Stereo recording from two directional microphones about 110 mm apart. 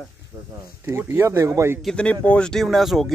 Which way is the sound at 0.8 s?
25° right (ahead or behind).